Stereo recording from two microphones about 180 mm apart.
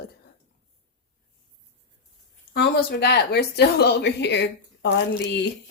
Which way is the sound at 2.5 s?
70° left (ahead or behind).